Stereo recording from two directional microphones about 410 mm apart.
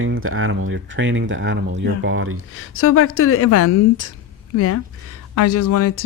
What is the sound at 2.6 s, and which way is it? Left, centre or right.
Speech, left.